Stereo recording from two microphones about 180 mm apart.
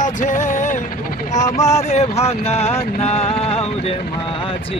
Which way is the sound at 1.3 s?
40° left (ahead or behind).